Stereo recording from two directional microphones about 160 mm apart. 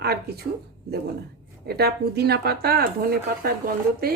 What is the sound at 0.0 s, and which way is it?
Speech, 80° right.